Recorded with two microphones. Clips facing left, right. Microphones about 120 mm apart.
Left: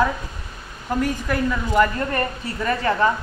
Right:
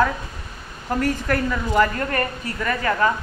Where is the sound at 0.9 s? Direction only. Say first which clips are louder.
Right 1 dB; 10° left (ahead or behind).